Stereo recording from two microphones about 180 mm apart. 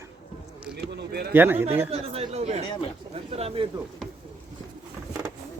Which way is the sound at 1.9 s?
35° right (ahead or behind).